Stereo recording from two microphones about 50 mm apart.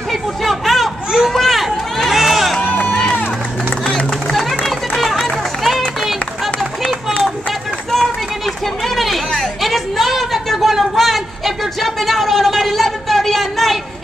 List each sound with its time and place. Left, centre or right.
0.1 s chatter: centre
1.3 s run: centre
2.6 s run: left
2.9 s run: centre
3.8 s a sound: centre
4.4 s music: centre
8.8 s a sound: centre